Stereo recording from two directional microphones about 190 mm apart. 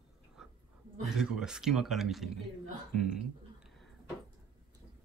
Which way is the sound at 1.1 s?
5° right (ahead or behind).